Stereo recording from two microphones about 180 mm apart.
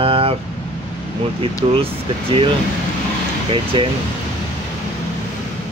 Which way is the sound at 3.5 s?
30° right (ahead or behind).